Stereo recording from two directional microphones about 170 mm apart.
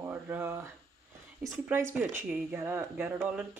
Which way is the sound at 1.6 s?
15° right (ahead or behind).